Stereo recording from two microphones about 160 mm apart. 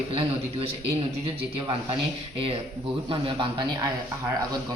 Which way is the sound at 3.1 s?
30° right (ahead or behind).